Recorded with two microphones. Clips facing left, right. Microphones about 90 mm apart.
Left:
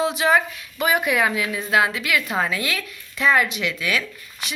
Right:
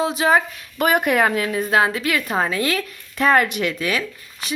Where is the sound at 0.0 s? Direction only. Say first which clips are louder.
Right 1 dB; 35° right (ahead or behind).